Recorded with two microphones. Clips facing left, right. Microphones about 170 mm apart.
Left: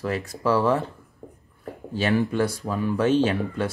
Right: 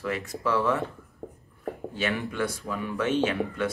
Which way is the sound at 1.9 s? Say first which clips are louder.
Left 9 dB; 35° left (ahead or behind).